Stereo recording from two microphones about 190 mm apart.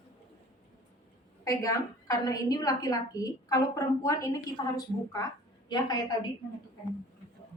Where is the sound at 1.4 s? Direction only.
20° left (ahead or behind).